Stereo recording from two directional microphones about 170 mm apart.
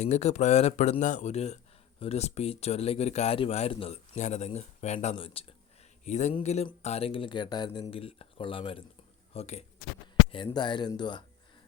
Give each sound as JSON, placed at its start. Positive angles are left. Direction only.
{"t": 0.0, "sound": "speech", "side_deg": 40}
{"t": 6.1, "sound": "speech", "side_deg": 45}
{"t": 10.3, "sound": "speech", "side_deg": 25}